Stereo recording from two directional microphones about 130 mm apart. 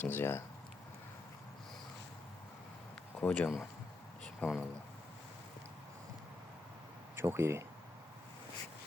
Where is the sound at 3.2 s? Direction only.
10° left (ahead or behind).